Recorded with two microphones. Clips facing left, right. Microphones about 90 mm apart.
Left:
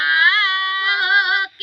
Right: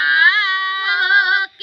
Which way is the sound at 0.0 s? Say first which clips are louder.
Right 2 dB; 15° right (ahead or behind).